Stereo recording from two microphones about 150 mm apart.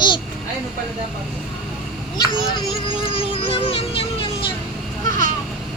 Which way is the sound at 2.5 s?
35° left (ahead or behind).